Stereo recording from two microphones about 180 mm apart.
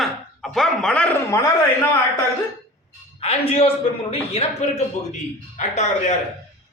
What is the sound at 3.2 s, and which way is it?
Speech, 35° left (ahead or behind).